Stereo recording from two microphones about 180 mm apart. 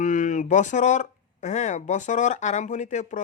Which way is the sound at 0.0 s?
45° left (ahead or behind).